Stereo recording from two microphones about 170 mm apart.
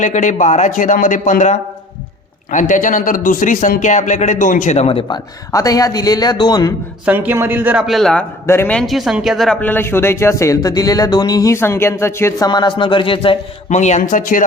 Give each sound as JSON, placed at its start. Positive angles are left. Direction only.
{"t": 0.0, "sound": "a man's voice", "side_deg": 45}
{"t": 7.0, "sound": "speech", "side_deg": -10}
{"t": 8.4, "sound": "a man's voice", "side_deg": 10}
{"t": 12.5, "sound": "speech", "side_deg": 25}
{"t": 13.7, "sound": "a man's voice", "side_deg": 45}